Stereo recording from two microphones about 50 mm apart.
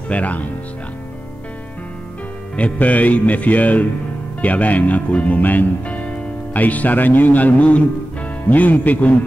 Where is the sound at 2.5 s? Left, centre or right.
Left.